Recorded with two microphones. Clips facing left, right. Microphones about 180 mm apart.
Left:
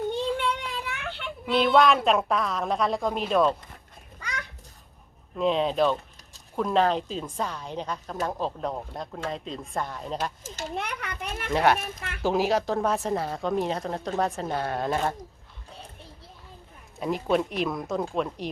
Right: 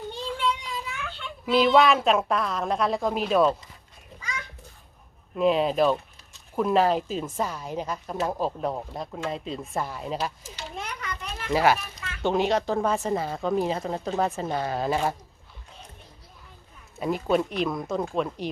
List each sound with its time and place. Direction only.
0.1 s child singing: 60° left (ahead or behind)
1.5 s speech: 5° right (ahead or behind)
5.4 s speech: 5° right (ahead or behind)
10.4 s speech: 45° left (ahead or behind)
10.8 s a child's voice: 65° left (ahead or behind)
11.5 s speech: centre (ahead or behind)
11.8 s speech: 50° left (ahead or behind)
12.2 s speech: centre (ahead or behind)
17.0 s speech: centre (ahead or behind)